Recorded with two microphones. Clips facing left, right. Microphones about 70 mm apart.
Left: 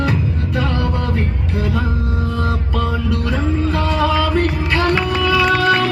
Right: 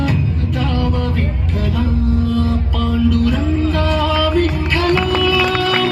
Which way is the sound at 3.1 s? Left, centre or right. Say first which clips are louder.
Right 3 dB; left.